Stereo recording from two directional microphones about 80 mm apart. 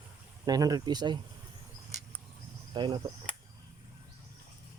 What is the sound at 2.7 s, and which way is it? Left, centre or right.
Cricket, right.